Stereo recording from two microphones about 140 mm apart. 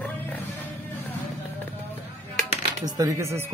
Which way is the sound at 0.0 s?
10° left (ahead or behind).